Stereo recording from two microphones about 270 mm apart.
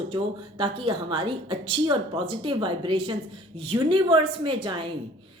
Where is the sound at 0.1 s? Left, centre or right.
Centre.